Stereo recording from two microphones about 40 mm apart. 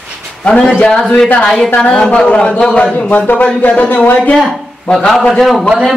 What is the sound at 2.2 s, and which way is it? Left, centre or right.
A man's voice, left.